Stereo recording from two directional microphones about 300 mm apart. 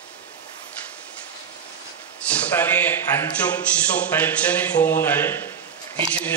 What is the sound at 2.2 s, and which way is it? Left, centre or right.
A man's voice, centre.